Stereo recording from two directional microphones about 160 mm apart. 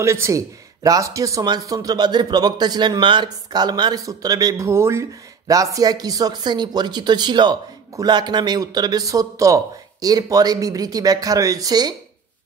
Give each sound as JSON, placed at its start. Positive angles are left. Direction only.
{"t": 0.0, "sound": "speech", "side_deg": -15}